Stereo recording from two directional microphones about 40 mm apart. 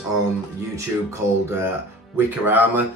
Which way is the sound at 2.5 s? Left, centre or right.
Right.